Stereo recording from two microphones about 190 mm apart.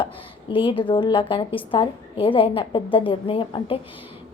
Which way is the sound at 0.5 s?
25° left (ahead or behind).